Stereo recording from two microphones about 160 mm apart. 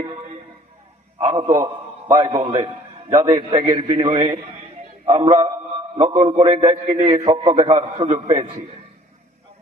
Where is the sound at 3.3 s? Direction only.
35° right (ahead or behind).